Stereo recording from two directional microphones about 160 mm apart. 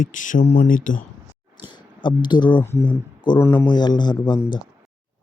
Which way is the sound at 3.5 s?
25° left (ahead or behind).